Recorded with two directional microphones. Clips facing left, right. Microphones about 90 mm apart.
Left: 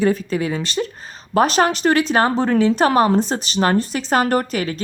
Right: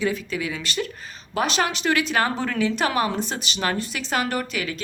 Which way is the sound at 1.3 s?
40° left (ahead or behind).